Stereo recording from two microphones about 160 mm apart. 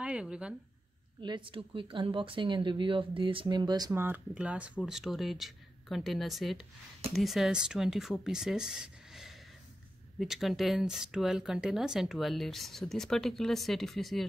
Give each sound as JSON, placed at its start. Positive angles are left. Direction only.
{"t": 0.0, "sound": "speech", "side_deg": -5}
{"t": 1.2, "sound": "speech", "side_deg": -30}
{"t": 4.0, "sound": "speech", "side_deg": -10}